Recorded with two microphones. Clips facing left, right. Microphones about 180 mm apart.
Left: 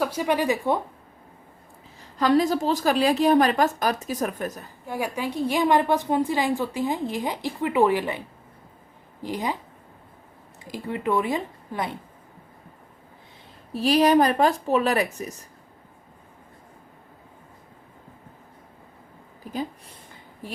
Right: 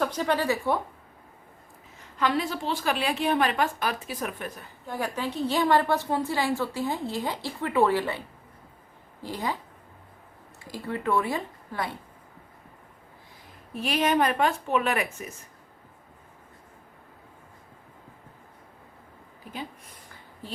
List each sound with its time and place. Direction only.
0.0 s a woman's voice: 10° left (ahead or behind)
2.0 s a woman's voice: 40° left (ahead or behind)
4.9 s a woman's voice: 10° left (ahead or behind)
9.2 s a woman's voice: 20° left (ahead or behind)
10.7 s speech: 20° left (ahead or behind)
13.7 s a woman's voice: 35° left (ahead or behind)